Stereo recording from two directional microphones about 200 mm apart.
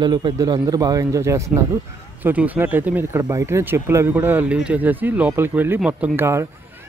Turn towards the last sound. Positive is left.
turn(degrees=-10)  # may be behind; listen again after turning